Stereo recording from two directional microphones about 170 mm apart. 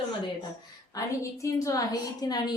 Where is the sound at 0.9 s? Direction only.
20° left (ahead or behind).